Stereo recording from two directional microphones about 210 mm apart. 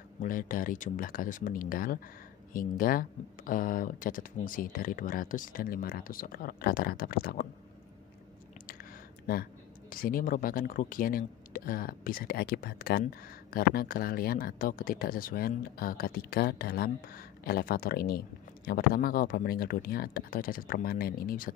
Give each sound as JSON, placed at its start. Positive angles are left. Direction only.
{"t": 0.2, "sound": "speech", "side_deg": 40}
{"t": 9.3, "sound": "speech", "side_deg": 45}